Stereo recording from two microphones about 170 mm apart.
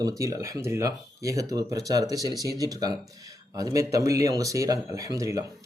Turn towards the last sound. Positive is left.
turn(degrees=-20)  # may be behind; listen again after turning